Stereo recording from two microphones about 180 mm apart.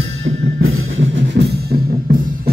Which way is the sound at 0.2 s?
90° right.